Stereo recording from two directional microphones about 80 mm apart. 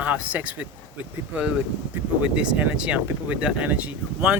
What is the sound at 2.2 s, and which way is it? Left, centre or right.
Speech, centre.